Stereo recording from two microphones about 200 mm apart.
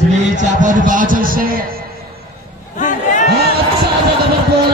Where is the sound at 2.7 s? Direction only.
40° left (ahead or behind).